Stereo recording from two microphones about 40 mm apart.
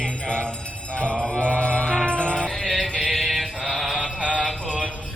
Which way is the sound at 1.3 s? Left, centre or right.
Left.